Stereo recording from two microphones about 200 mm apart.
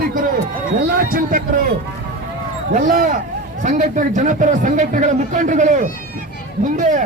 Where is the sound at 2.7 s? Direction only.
40° right (ahead or behind).